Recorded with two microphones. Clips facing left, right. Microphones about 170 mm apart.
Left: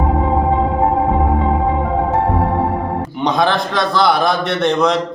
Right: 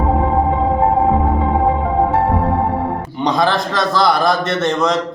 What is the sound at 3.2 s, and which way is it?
A man's voice, centre (ahead or behind).